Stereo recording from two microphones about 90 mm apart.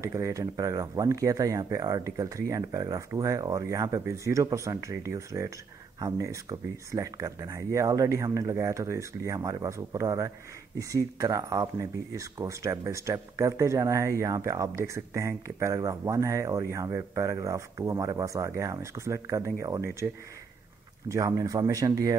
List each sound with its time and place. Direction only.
0.0 s speech: 35° right (ahead or behind)
21.3 s speech: 40° right (ahead or behind)